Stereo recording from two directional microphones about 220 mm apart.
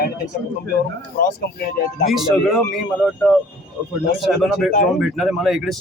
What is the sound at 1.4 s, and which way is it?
Speech, 45° left (ahead or behind).